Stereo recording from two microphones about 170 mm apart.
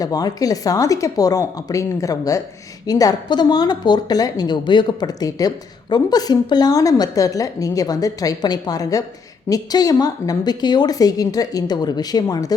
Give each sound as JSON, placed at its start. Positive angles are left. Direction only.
{"t": 0.0, "sound": "speech", "side_deg": 20}